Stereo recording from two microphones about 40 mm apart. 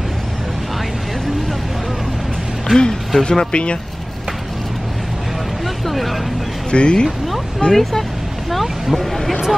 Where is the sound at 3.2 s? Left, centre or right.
Left.